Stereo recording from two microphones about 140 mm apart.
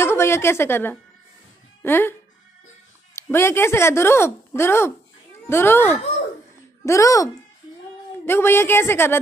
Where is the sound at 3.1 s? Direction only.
20° left (ahead or behind).